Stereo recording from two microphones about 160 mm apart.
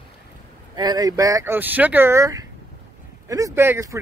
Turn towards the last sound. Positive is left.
turn(degrees=-15)  # may be behind; listen again after turning